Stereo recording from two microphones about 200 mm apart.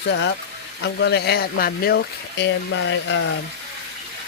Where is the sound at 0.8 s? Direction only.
55° left (ahead or behind).